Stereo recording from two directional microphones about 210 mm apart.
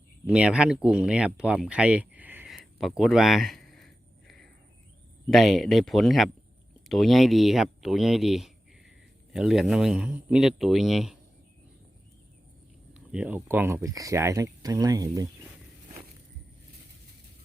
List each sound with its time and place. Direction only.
0.3 s speech: 5° right (ahead or behind)
2.7 s a sound: centre (ahead or behind)
5.3 s speech: centre (ahead or behind)
12.9 s speech: 5° right (ahead or behind)